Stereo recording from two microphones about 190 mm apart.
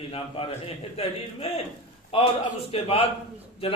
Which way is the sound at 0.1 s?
30° left (ahead or behind).